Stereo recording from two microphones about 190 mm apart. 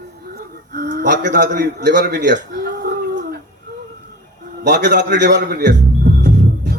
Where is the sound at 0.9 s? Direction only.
60° right (ahead or behind).